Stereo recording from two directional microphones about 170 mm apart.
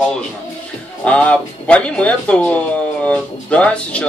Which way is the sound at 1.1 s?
10° left (ahead or behind).